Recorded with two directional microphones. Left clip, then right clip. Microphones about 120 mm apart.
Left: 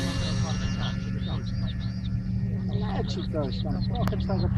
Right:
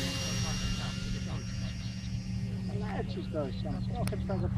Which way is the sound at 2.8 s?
15° right (ahead or behind).